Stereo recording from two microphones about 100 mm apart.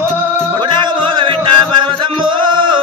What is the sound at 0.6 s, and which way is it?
Music, 55° right (ahead or behind).